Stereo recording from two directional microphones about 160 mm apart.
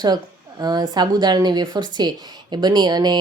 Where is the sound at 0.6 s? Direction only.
25° right (ahead or behind).